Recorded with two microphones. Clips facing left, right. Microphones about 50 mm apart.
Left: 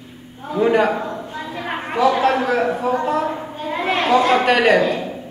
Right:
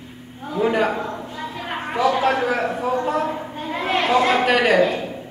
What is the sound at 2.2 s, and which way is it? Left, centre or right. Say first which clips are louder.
Speech: left 2 dB; centre.